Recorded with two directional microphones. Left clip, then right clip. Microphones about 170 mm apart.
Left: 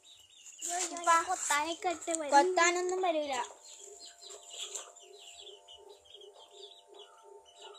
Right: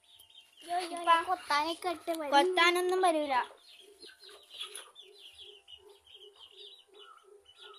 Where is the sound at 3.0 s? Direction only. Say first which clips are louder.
Right 4 dB; 80° right.